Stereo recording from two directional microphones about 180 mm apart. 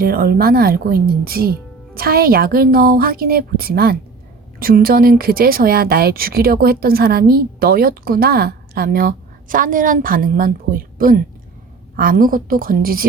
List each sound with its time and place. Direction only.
0.0 s a woman's voice: 55° right (ahead or behind)